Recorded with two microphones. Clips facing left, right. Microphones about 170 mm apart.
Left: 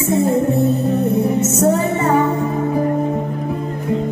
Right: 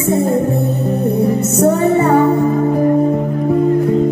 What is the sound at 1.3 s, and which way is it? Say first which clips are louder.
Music: right 2 dB; 35° right (ahead or behind).